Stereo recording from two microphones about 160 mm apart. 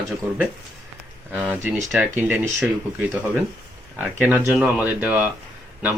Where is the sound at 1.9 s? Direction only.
10° right (ahead or behind).